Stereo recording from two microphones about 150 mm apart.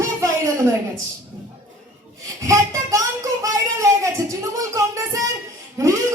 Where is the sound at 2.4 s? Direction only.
20° right (ahead or behind).